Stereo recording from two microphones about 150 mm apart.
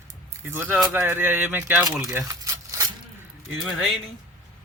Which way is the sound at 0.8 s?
15° right (ahead or behind).